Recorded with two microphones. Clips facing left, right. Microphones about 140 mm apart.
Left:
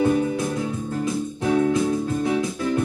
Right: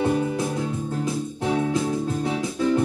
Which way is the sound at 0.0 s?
30° right (ahead or behind).